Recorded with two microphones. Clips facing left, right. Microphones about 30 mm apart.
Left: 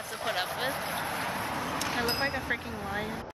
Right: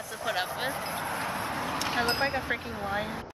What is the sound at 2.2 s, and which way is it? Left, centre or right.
Speech, centre.